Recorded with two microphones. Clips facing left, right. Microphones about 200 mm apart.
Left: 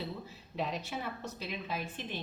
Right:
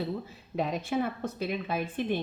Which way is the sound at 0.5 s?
50° right (ahead or behind).